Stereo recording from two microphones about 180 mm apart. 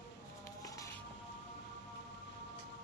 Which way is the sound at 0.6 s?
20° left (ahead or behind).